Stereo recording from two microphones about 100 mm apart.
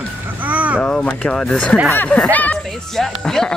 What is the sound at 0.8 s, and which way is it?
Speech, 10° left (ahead or behind).